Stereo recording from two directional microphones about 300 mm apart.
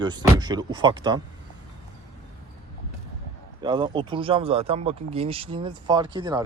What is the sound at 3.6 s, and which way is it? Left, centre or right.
Speech, centre.